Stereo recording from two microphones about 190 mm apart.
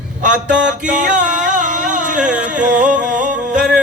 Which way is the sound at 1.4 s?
40° right (ahead or behind).